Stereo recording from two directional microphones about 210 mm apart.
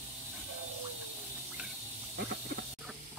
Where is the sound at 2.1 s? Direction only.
50° right (ahead or behind).